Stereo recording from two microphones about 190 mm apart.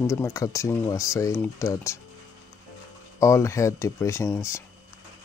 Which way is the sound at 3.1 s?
15° left (ahead or behind).